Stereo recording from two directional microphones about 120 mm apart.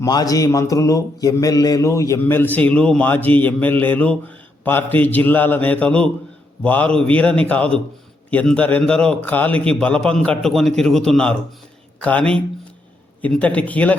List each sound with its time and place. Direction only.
0.0 s mantra: 30° left (ahead or behind)
2.2 s a man's voice: 15° left (ahead or behind)